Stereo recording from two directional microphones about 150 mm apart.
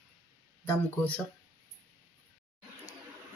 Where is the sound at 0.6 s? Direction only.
10° left (ahead or behind).